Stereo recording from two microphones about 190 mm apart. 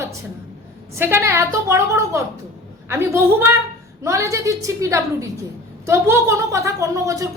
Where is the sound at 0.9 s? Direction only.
10° right (ahead or behind).